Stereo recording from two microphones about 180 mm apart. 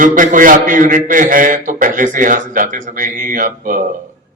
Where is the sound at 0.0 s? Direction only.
45° right (ahead or behind).